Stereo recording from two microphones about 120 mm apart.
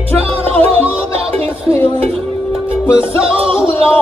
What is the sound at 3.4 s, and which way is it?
Music, 50° right (ahead or behind).